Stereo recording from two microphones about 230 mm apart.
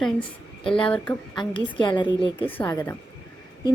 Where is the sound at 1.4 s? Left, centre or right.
Left.